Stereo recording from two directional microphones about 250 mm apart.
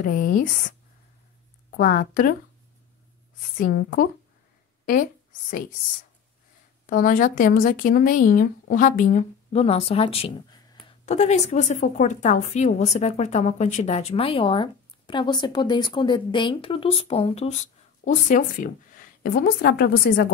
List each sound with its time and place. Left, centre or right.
0.0 s speech: left
1.8 s speech: left
3.5 s speech: left
6.9 s speech: left